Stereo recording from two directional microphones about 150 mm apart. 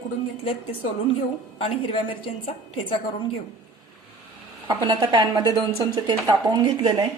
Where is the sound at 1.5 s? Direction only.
40° left (ahead or behind).